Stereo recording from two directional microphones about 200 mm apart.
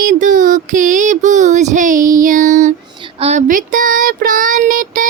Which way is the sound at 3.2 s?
35° right (ahead or behind).